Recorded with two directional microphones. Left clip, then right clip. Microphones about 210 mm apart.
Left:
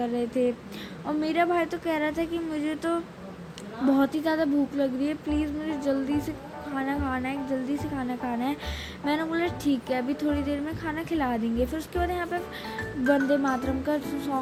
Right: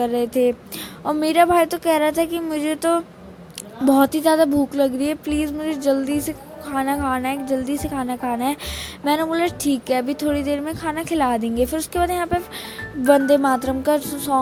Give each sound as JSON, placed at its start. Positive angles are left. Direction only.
{"t": 0.0, "sound": "music", "side_deg": -55}
{"t": 1.0, "sound": "a woman's voice", "side_deg": -55}
{"t": 13.1, "sound": "music", "side_deg": -55}